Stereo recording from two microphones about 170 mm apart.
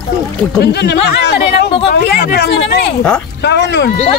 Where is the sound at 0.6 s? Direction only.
80° left.